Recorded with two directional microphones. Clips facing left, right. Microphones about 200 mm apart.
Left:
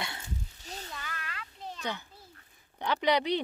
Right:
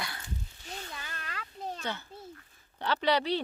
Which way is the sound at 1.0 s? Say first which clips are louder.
Even; 30° right (ahead or behind).